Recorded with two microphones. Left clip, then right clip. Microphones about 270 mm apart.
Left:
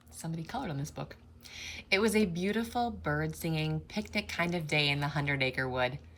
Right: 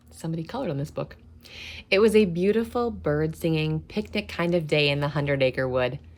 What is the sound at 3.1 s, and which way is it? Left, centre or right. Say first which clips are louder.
Speech: right 9 dB; right.